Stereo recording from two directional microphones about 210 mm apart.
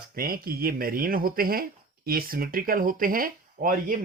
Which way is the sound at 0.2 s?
45° right (ahead or behind).